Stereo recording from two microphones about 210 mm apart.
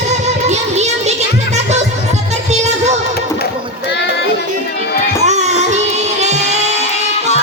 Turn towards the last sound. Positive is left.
turn(degrees=-30)  # may be behind; listen again after turning